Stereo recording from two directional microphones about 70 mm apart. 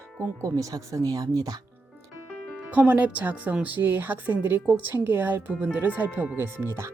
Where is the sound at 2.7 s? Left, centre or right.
Right.